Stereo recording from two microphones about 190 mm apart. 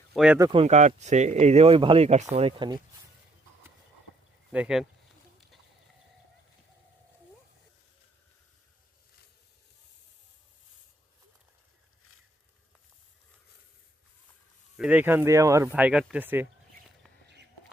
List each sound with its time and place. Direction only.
0.1 s speech: 5° right (ahead or behind)
0.3 s speech: 20° right (ahead or behind)
0.6 s speech: 35° right (ahead or behind)
4.5 s speech: 5° right (ahead or behind)
14.8 s speech: 5° right (ahead or behind)